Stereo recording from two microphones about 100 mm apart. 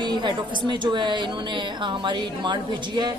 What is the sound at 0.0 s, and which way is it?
A woman's voice, 50° right (ahead or behind).